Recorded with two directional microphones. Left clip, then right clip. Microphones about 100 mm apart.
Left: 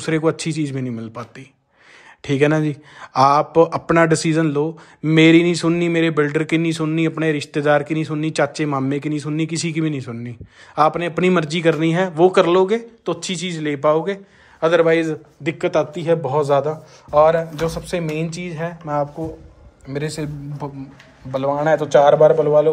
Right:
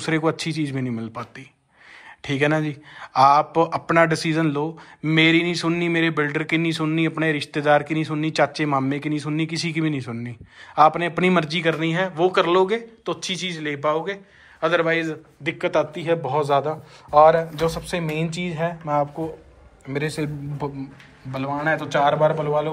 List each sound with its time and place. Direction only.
0.0 s speech: 35° left (ahead or behind)
1.1 s a man's voice: 40° left (ahead or behind); by 12.4 s 60° left (ahead or behind)
12.4 s speech: 45° left (ahead or behind); by 14.1 s 70° left (ahead or behind)
14.6 s a man's voice: 55° left (ahead or behind); by 16.7 s 40° left (ahead or behind)
17.1 s speech: 20° left (ahead or behind)
18.9 s speech: 5° right (ahead or behind)
19.9 s speech: 20° left (ahead or behind)
21.5 s a man's voice: 50° left (ahead or behind)